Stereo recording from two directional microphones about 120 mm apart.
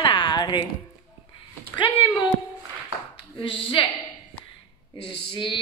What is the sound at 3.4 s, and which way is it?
Speech, 45° left (ahead or behind).